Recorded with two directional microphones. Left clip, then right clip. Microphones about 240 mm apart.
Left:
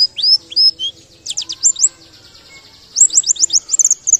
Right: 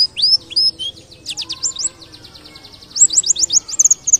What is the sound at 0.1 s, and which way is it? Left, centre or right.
Chirp, centre.